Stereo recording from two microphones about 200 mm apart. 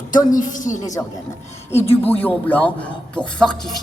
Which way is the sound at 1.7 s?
10° left (ahead or behind).